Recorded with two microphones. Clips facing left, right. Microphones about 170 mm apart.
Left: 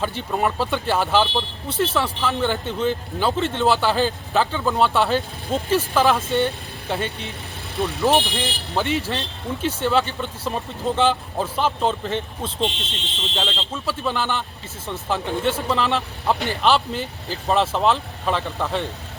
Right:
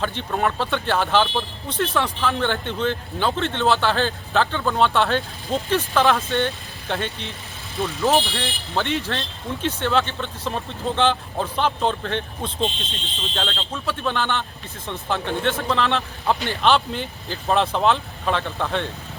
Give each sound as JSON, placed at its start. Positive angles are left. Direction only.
{"t": 0.2, "sound": "speech", "side_deg": 5}
{"t": 12.6, "sound": "speech", "side_deg": 80}
{"t": 13.8, "sound": "speech", "side_deg": 5}